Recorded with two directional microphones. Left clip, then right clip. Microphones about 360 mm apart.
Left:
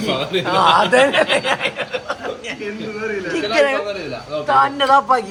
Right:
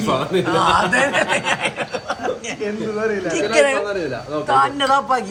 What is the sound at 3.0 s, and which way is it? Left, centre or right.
Speech, right.